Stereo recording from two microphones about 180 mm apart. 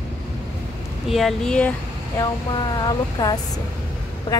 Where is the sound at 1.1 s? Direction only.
Centre (ahead or behind).